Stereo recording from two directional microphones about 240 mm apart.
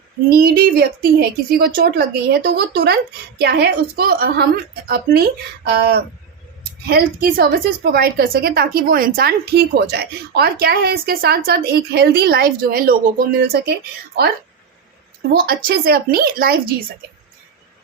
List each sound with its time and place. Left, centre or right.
0.3 s a woman's voice: right
15.4 s a woman's voice: right